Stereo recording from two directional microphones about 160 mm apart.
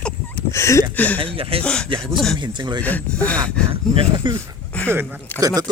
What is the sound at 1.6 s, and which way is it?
Speech, 5° left (ahead or behind).